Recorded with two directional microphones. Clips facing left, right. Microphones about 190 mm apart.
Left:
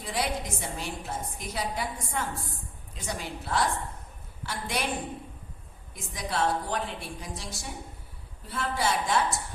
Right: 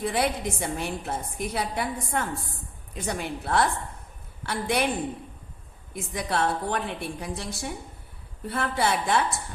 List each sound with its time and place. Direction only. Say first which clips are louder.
0.0 s a woman's voice: right 5 dB; 60° right (ahead or behind)
5.9 s a woman's voice: right 5 dB; 60° right (ahead or behind)